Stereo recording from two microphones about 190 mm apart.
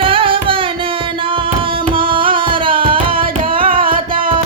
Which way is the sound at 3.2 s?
50° right (ahead or behind).